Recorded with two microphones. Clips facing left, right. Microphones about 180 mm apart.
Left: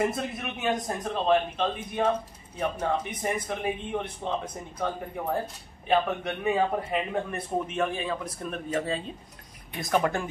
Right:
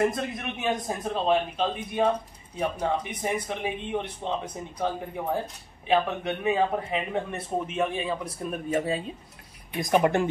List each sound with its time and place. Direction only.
0.0 s a man's voice: 5° left (ahead or behind); by 10.2 s 20° right (ahead or behind)